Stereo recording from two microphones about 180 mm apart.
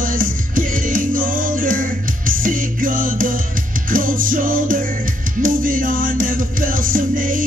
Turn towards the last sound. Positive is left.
turn(degrees=-50)  # may be behind; listen again after turning